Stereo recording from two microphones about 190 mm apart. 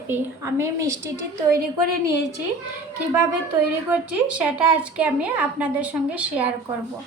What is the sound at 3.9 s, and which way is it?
A woman's voice, 5° right (ahead or behind).